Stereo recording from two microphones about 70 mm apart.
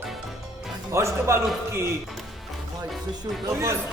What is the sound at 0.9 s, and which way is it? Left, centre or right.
Speech, right.